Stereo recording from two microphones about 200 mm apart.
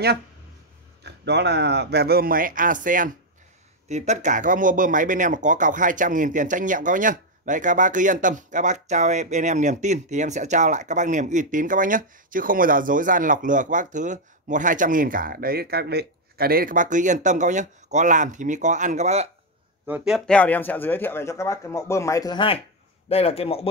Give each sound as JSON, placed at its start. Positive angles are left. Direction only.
{"t": 1.0, "sound": "speech", "side_deg": -60}
{"t": 19.9, "sound": "speech", "side_deg": 0}